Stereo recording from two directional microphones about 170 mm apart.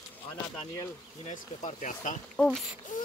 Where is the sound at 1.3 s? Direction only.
50° left (ahead or behind).